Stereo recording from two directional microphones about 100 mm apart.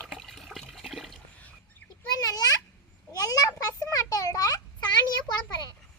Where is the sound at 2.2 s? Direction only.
40° left (ahead or behind).